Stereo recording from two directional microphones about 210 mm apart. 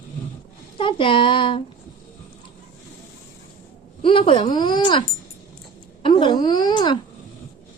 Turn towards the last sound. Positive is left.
turn(degrees=20)  # may be behind; listen again after turning